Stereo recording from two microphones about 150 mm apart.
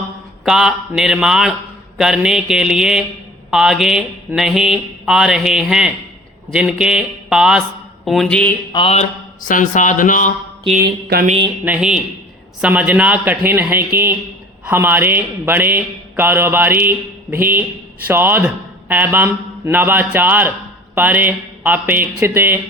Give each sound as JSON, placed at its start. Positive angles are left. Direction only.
{"t": 0.4, "sound": "mantra", "side_deg": -5}
{"t": 8.7, "sound": "mantra", "side_deg": 40}
{"t": 9.4, "sound": "speech", "side_deg": 60}
{"t": 10.8, "sound": "a sound", "side_deg": -70}
{"t": 11.6, "sound": "a man's voice", "side_deg": -10}